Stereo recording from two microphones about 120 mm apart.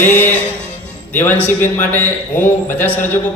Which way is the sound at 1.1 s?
15° left (ahead or behind).